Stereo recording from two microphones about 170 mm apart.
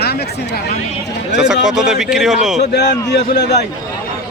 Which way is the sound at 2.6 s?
75° left (ahead or behind).